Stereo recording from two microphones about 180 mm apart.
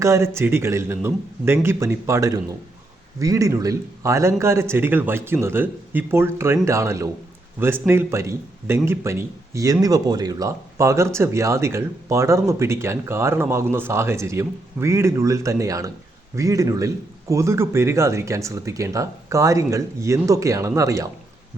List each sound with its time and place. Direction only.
0.0 s a man's voice: 15° right (ahead or behind)